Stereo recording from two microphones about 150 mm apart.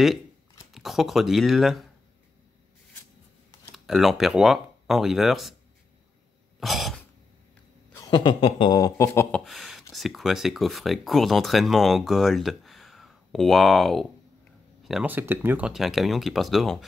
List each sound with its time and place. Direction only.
0.7 s speech: centre (ahead or behind)
3.7 s speech: centre (ahead or behind)
6.6 s throat clearing: centre (ahead or behind)
8.1 s a sound: 30° left (ahead or behind)
9.3 s speech: centre (ahead or behind)